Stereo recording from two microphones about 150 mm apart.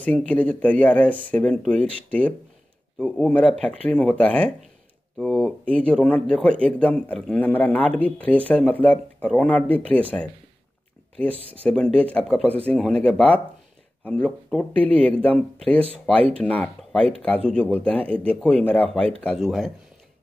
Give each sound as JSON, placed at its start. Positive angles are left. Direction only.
{"t": 0.0, "sound": "speech", "side_deg": 5}